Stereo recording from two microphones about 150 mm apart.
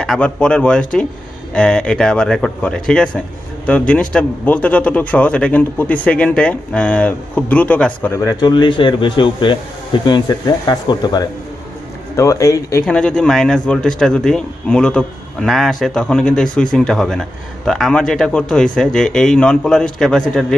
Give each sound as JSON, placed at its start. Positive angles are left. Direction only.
{"t": 0.0, "sound": "speech", "side_deg": 5}
{"t": 12.8, "sound": "a man's voice", "side_deg": 5}